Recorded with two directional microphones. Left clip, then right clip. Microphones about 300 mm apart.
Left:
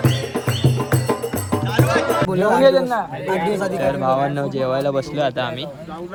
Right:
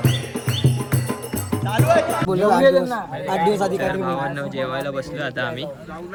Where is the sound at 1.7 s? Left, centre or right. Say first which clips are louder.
Right 1 dB; centre.